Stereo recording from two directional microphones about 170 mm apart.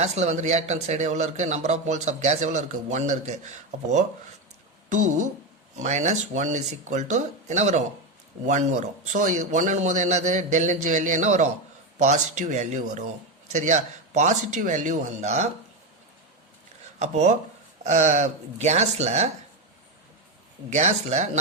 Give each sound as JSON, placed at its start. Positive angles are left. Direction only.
{"t": 0.0, "sound": "a man's voice", "side_deg": -40}
{"t": 17.0, "sound": "speech", "side_deg": -40}
{"t": 20.7, "sound": "a man's voice", "side_deg": -40}